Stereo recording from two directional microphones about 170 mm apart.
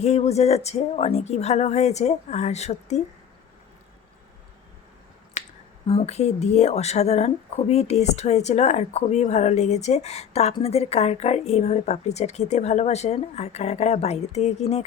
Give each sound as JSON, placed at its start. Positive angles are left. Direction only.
{"t": 0.0, "sound": "speech", "side_deg": 40}
{"t": 5.4, "sound": "finger snapping", "side_deg": 45}
{"t": 5.9, "sound": "speech", "side_deg": 35}